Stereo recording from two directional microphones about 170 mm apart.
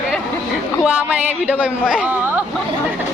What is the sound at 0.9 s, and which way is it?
A man's voice, 10° right (ahead or behind).